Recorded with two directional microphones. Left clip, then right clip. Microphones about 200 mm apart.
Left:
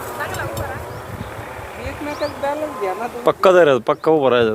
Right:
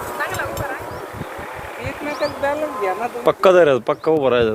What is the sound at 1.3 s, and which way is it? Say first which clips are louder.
Vehicle: right 1 dB; 50° right (ahead or behind).